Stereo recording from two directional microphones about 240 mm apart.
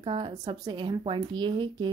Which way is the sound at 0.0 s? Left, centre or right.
Right.